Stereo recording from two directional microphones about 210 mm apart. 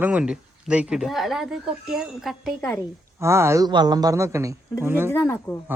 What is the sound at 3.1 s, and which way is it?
Speech, 10° right (ahead or behind).